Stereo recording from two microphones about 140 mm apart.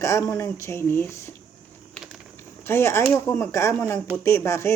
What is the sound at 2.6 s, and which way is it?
Speech, 15° left (ahead or behind).